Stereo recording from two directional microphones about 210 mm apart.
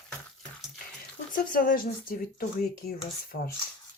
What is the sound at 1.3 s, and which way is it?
Speech, 40° left (ahead or behind).